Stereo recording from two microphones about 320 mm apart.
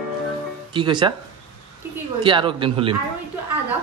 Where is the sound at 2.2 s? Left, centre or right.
Centre.